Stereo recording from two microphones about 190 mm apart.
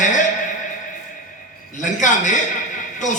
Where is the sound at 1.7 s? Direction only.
40° left (ahead or behind).